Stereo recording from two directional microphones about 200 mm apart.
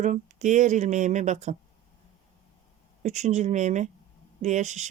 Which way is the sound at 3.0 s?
35° right (ahead or behind).